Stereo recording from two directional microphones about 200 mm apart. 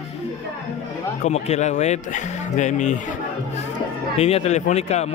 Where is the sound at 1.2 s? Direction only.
35° left (ahead or behind).